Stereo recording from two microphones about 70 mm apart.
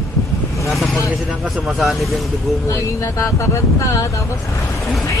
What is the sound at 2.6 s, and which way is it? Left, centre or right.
Speech, left.